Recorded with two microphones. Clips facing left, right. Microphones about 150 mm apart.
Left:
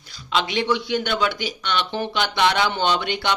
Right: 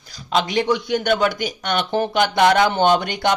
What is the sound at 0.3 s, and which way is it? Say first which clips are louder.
Speech: right 3 dB; 45° right (ahead or behind).